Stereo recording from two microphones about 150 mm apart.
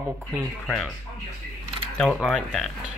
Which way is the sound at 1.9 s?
5° left (ahead or behind).